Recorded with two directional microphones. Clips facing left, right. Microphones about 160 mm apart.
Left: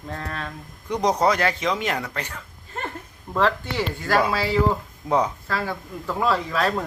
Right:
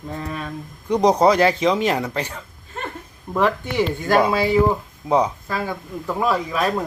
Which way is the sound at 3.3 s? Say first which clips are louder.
Right 3 dB; 15° right (ahead or behind).